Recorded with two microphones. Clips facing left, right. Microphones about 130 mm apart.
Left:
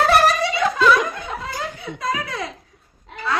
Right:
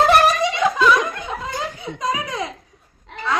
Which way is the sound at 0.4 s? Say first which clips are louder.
Right 2 dB; 15° right (ahead or behind).